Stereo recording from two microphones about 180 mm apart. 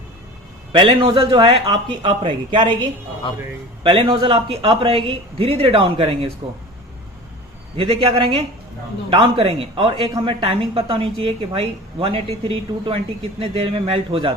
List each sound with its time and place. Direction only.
0.7 s a man's voice: 30° right (ahead or behind)
3.8 s a woman's voice: 30° right (ahead or behind)
7.8 s a woman's voice: 30° right (ahead or behind)